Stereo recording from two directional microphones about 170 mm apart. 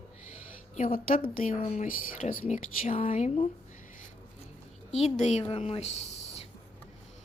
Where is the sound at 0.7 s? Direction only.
50° left (ahead or behind).